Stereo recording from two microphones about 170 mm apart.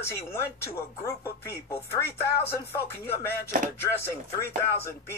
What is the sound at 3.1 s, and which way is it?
Speech, 15° left (ahead or behind).